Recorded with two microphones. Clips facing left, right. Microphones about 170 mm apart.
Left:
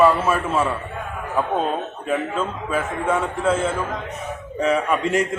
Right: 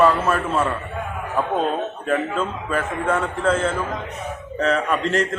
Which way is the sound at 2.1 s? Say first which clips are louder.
Even; 5° left (ahead or behind).